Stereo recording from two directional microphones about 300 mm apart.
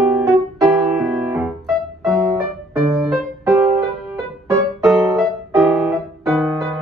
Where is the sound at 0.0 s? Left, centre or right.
Centre.